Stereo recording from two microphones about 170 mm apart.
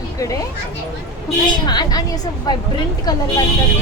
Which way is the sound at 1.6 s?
25° left (ahead or behind).